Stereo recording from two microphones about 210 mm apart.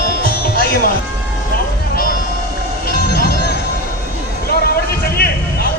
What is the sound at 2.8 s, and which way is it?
Music, 45° left (ahead or behind).